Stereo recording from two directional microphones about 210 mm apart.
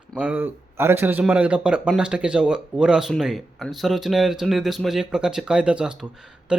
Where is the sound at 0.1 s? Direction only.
5° right (ahead or behind).